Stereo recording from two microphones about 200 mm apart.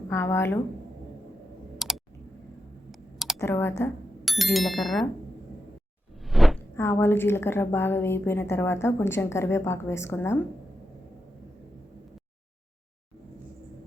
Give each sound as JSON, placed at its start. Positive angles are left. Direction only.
{"t": 0.1, "sound": "a woman's voice", "side_deg": 15}
{"t": 1.8, "sound": "clicking", "side_deg": 0}
{"t": 2.9, "sound": "a sound", "side_deg": 0}
{"t": 3.3, "sound": "a woman's voice", "side_deg": 10}
{"t": 4.3, "sound": "speech", "side_deg": 0}
{"t": 6.2, "sound": "a sound", "side_deg": 0}
{"t": 6.7, "sound": "a woman's voice", "side_deg": 10}